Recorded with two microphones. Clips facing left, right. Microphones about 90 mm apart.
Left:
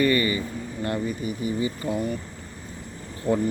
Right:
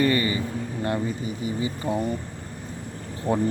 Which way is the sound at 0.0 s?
25° right (ahead or behind).